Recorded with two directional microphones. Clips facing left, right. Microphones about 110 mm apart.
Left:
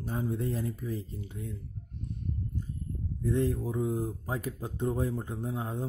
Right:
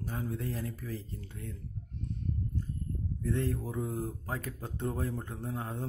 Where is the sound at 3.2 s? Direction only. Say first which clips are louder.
Left 4 dB; 15° left (ahead or behind).